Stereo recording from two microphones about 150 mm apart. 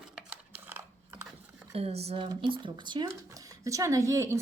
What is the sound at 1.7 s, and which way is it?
Speech, 45° right (ahead or behind).